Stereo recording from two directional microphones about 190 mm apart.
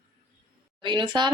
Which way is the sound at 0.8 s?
25° right (ahead or behind).